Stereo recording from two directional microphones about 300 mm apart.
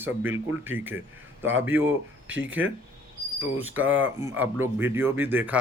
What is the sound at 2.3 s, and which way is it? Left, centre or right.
Speech, right.